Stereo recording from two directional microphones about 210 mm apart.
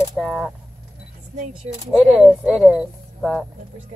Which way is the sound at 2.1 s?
Centre (ahead or behind).